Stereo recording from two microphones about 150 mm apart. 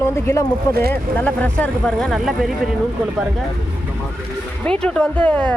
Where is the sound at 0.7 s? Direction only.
90° right.